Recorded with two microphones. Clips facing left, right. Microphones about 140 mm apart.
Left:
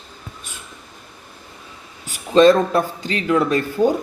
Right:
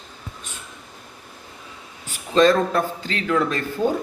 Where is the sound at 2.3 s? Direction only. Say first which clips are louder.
Left 4 dB; 15° left (ahead or behind).